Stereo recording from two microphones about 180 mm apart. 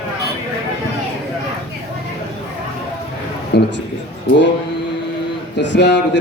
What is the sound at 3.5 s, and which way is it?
Speech, 70° left (ahead or behind).